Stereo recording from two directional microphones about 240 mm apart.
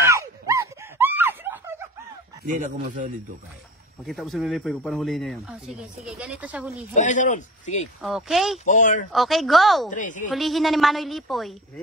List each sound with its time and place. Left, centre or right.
0.1 s wail: centre
2.4 s speech: right
4.0 s speech: centre
7.0 s speech: left
8.0 s speech: centre
8.6 s speech: left
9.1 s speech: centre
9.8 s speech: left
10.3 s speech: centre